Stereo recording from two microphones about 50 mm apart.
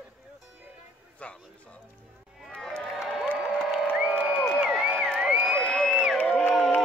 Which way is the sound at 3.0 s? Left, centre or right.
Centre.